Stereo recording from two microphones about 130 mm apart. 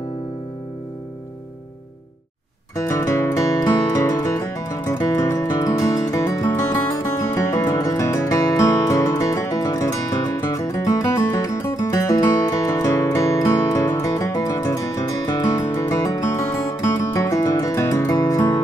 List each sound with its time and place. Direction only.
2.7 s music: 20° left (ahead or behind)